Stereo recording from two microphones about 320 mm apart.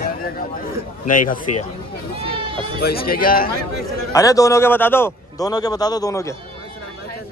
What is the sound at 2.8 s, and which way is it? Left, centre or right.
Speech, left.